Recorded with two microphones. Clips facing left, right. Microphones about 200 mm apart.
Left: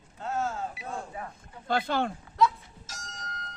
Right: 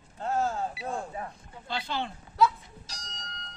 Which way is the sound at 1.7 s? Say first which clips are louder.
Left 6 dB; 50° left (ahead or behind).